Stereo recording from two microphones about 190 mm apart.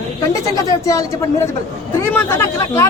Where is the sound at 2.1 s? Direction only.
10° left (ahead or behind).